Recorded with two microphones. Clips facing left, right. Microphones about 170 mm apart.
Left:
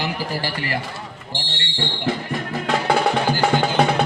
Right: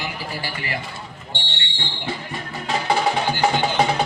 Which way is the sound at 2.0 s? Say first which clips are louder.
Left 5 dB; 65° left (ahead or behind).